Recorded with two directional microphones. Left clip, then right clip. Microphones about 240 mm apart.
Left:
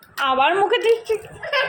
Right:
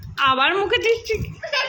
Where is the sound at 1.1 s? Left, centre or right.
Centre.